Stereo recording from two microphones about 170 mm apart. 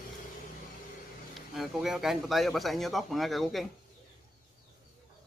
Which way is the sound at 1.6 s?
Centre (ahead or behind).